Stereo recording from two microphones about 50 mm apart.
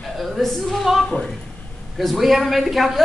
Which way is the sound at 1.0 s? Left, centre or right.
Centre.